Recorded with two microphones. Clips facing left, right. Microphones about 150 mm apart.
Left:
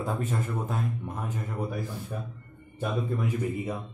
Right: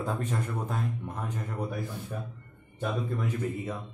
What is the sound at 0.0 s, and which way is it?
Speech, 5° left (ahead or behind).